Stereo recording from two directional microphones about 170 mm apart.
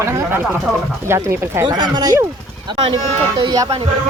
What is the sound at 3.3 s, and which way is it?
Speech, 25° right (ahead or behind).